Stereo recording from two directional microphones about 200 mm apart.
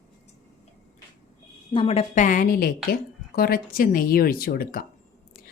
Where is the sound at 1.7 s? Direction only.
30° left (ahead or behind); by 4.8 s 45° left (ahead or behind).